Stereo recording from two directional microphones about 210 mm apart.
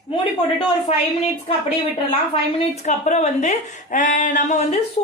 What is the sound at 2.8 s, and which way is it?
A woman's voice, 35° left (ahead or behind).